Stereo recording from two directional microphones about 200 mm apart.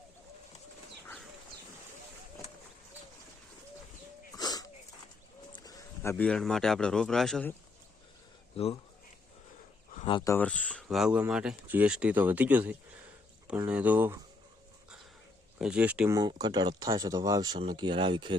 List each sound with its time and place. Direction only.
1.0 s a sound: 5° left (ahead or behind)
4.4 s dog: 20° left (ahead or behind)
5.5 s speech: 20° left (ahead or behind); by 7.5 s centre (ahead or behind)
8.5 s speech: 30° left (ahead or behind)
9.9 s a sound: 30° left (ahead or behind)
10.2 s speech: 10° left (ahead or behind); by 14.2 s 10° right (ahead or behind)
15.5 s speech: 5° right (ahead or behind)
16.1 s speech: 20° right (ahead or behind)